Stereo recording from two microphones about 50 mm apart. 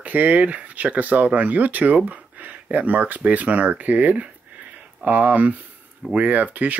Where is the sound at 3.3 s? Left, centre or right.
Right.